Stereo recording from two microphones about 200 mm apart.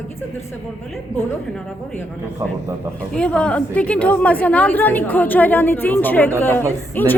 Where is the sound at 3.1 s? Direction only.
5° left (ahead or behind).